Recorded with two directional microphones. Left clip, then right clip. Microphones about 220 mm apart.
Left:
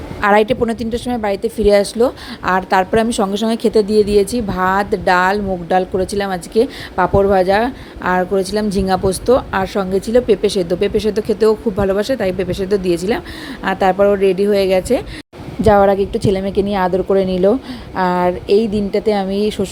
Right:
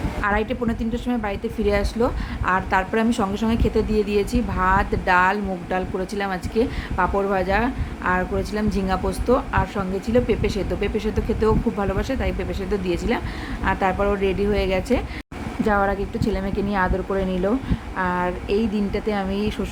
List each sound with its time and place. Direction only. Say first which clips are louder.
0.2 s a woman's voice: left 11 dB; 30° left (ahead or behind)